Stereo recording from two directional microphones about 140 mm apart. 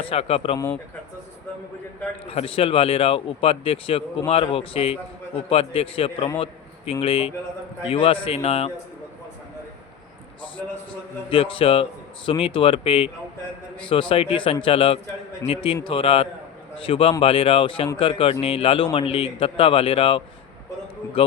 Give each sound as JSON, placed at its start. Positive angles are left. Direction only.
{"t": 0.0, "sound": "speech", "side_deg": 45}
{"t": 2.2, "sound": "a man's voice", "side_deg": 45}
{"t": 11.3, "sound": "a man's voice", "side_deg": 40}